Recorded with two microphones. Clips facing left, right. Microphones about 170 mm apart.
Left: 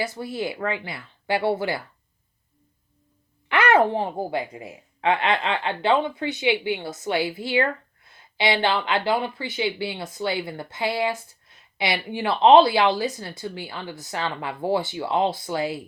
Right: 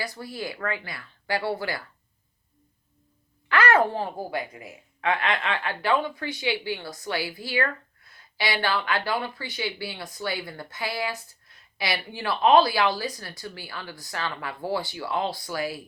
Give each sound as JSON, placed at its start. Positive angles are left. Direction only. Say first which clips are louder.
{"t": 0.0, "sound": "speech", "louder": "left 6 dB", "side_deg": 20}
{"t": 3.5, "sound": "a sound", "louder": "left 2 dB", "side_deg": 20}
{"t": 3.9, "sound": "speech", "louder": "left 4 dB", "side_deg": 20}